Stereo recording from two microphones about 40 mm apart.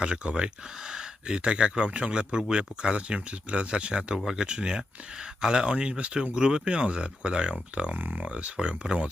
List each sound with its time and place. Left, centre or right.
0.0 s speech: right
7.9 s speech: right
8.3 s speech: right